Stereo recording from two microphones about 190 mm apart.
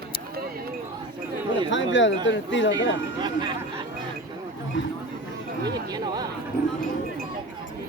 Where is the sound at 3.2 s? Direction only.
25° right (ahead or behind).